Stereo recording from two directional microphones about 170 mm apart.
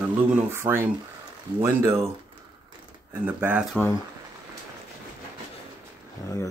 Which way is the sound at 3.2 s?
10° right (ahead or behind).